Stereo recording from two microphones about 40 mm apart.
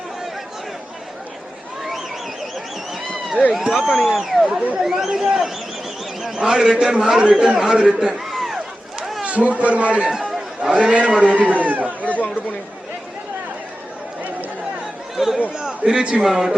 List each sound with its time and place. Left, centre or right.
3.7 s speech: centre
6.4 s a man's voice: centre
8.2 s a sound: centre
9.2 s a man's voice: right
10.1 s chatter: centre
10.6 s a man's voice: centre
11.2 s a man's voice: right
12.0 s chatter: left
15.1 s chatter: centre
15.8 s a man's voice: right